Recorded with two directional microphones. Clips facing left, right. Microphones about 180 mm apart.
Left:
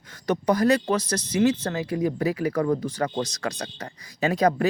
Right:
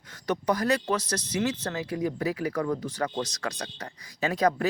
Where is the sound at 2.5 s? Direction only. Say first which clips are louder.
Left 5 dB; 35° left (ahead or behind).